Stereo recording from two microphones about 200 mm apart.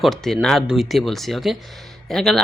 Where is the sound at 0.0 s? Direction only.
Centre (ahead or behind).